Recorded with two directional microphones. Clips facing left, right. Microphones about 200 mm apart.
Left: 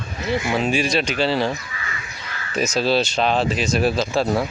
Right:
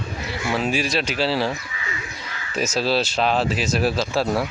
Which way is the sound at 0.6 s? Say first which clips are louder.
Left 2 dB; centre (ahead or behind).